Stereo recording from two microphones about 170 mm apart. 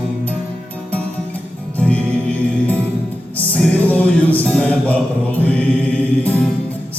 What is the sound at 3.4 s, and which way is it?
Music, 10° left (ahead or behind).